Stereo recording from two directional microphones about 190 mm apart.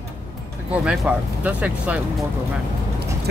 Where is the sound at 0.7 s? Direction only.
5° right (ahead or behind).